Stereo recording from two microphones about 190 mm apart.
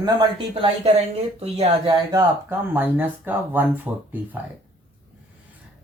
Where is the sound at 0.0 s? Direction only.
25° right (ahead or behind).